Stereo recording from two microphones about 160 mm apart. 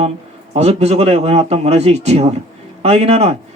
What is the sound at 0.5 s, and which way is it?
A man's voice, 40° right (ahead or behind).